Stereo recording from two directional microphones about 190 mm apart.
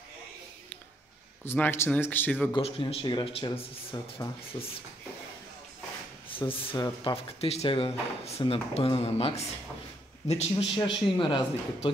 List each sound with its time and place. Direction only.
1.4 s speech: 10° left (ahead or behind)
2.5 s speech: 30° left (ahead or behind)
6.2 s speech: 30° left (ahead or behind)